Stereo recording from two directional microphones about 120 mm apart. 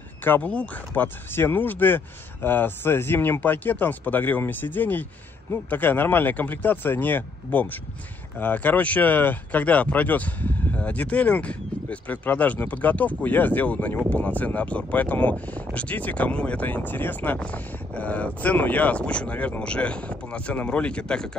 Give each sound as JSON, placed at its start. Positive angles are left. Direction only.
{"t": 0.2, "sound": "speech", "side_deg": 15}